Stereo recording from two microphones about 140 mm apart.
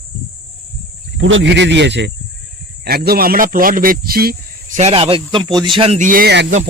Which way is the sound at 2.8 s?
90° right.